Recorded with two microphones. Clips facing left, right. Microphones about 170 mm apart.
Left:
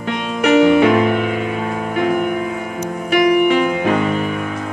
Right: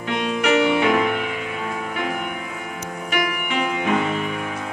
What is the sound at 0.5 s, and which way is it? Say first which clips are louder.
Music: left 7 dB; 45° left (ahead or behind).